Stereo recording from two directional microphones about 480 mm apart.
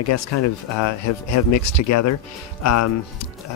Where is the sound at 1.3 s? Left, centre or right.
Left.